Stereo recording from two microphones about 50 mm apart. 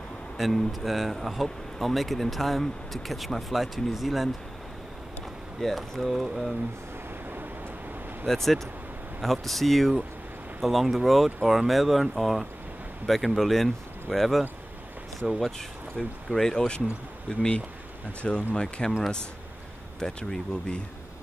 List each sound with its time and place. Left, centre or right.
0.4 s speech: centre
5.6 s speech: centre
8.3 s speech: centre
15.2 s speech: centre
16.0 s speech: centre
20.0 s speech: centre